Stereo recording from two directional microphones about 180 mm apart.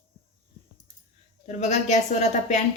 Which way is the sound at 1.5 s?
40° left (ahead or behind).